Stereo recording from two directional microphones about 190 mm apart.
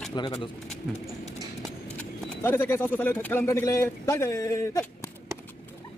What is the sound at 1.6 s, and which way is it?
Speech, 10° left (ahead or behind).